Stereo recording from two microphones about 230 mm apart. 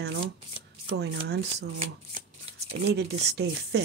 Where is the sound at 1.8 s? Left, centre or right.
Right.